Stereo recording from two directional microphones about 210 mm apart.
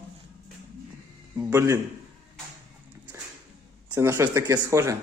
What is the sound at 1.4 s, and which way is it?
Speech, 15° right (ahead or behind).